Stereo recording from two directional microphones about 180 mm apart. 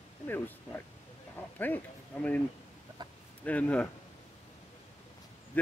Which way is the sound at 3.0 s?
25° right (ahead or behind).